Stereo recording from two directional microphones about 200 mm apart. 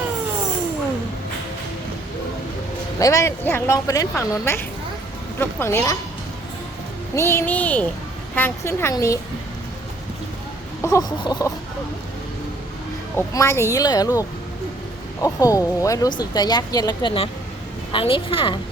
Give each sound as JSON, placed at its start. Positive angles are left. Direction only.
{"t": 3.0, "sound": "speech", "side_deg": 15}
{"t": 7.2, "sound": "speech", "side_deg": 10}
{"t": 10.8, "sound": "speech", "side_deg": 15}
{"t": 13.1, "sound": "speech", "side_deg": 15}